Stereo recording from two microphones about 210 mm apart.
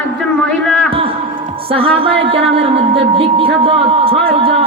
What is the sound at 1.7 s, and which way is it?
Speech, 25° right (ahead or behind).